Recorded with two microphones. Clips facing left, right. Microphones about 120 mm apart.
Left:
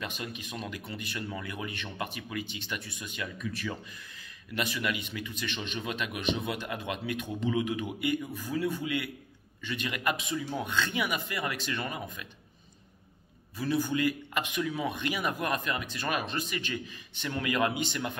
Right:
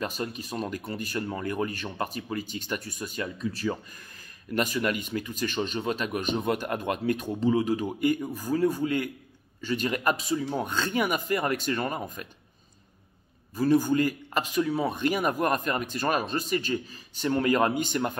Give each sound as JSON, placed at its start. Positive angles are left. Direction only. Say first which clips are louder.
{"t": 0.0, "sound": "a man's voice", "louder": "right 6 dB", "side_deg": -40}
{"t": 4.1, "sound": "a man's voice", "louder": "right 11 dB", "side_deg": -45}
{"t": 13.6, "sound": "a man's voice", "louder": "right 7 dB", "side_deg": -40}